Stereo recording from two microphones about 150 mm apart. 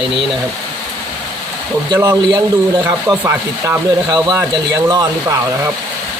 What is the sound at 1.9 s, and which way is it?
Speech, 15° right (ahead or behind).